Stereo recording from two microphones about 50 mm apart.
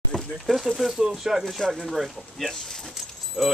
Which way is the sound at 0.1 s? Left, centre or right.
Left.